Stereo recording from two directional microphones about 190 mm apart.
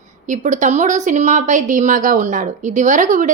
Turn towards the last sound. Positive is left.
turn(degrees=-40)  # may be behind; listen again after turning